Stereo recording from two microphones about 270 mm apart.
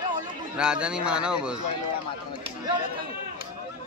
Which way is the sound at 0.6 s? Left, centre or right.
Centre.